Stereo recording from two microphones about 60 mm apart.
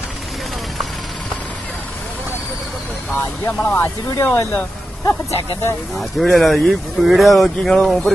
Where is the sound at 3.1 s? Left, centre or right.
Left.